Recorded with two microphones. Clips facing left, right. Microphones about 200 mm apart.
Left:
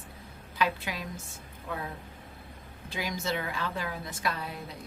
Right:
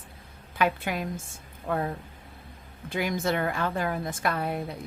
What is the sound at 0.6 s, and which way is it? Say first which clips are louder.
Speech: right 4 dB; 55° right (ahead or behind).